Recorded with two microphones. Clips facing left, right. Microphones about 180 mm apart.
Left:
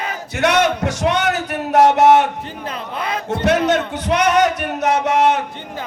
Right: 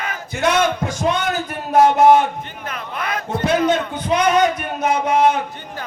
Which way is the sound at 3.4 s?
75° left (ahead or behind).